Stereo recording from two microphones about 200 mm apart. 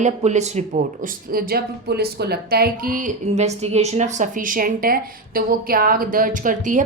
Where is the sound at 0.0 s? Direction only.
35° right (ahead or behind).